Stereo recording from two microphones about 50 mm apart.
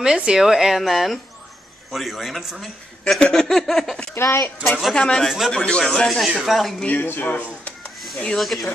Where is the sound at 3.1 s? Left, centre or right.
Centre.